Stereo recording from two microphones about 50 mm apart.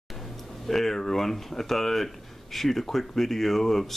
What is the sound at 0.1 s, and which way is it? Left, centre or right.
Speech, centre.